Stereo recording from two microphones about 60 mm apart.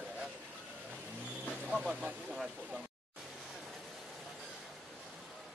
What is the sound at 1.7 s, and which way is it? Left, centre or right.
Speech, right.